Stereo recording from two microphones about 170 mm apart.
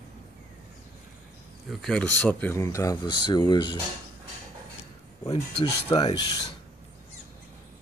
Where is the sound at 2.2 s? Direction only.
15° left (ahead or behind).